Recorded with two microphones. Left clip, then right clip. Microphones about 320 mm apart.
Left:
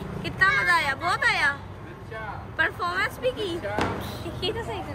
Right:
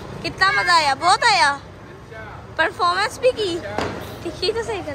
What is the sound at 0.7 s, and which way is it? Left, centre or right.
A woman's voice, centre.